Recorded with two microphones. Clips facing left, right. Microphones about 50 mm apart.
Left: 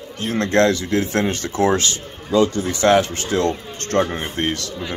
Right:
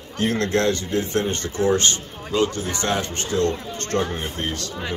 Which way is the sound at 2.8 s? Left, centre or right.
Left.